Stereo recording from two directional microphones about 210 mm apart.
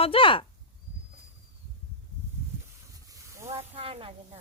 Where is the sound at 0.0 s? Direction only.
25° left (ahead or behind).